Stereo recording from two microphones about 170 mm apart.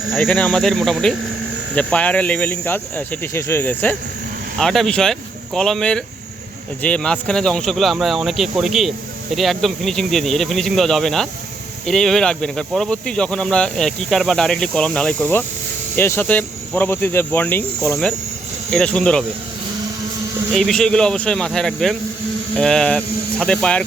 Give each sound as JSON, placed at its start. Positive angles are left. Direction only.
{"t": 0.2, "sound": "speech", "side_deg": 10}
{"t": 20.5, "sound": "speech", "side_deg": 0}